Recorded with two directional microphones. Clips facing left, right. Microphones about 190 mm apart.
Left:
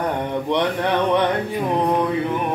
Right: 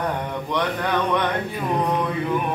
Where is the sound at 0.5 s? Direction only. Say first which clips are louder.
Left 2 dB; 25° left (ahead or behind).